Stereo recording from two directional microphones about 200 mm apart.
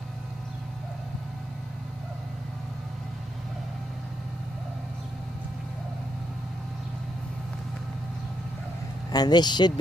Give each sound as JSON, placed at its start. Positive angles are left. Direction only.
{"t": 9.1, "sound": "speech", "side_deg": 20}